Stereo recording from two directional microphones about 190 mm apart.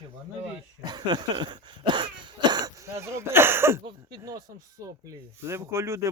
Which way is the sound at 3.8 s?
20° right (ahead or behind).